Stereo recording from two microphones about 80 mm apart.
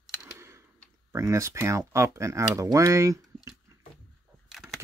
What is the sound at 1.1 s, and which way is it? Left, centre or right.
Speech, right.